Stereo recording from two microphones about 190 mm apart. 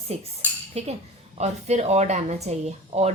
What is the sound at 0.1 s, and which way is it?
Speech, 35° right (ahead or behind).